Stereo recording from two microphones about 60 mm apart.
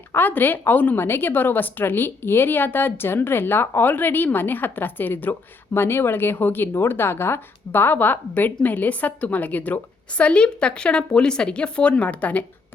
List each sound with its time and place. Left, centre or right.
0.1 s a woman's voice: left
0.9 s a woman's voice: left